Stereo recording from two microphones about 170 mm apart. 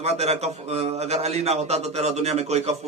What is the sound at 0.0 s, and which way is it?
A man's voice, 40° right (ahead or behind).